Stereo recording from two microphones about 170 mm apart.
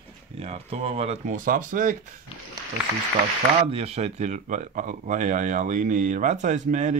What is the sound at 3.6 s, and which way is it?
Speech, 35° right (ahead or behind).